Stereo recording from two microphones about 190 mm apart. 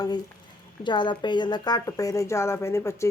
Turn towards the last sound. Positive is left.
turn(degrees=15)  # may be behind; listen again after turning